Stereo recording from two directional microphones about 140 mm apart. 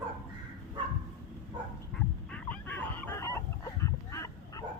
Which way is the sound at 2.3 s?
10° left (ahead or behind).